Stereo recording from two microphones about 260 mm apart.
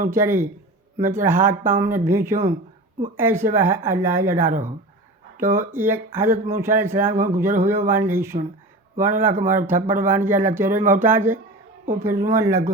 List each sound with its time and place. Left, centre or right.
0.0 s speech: centre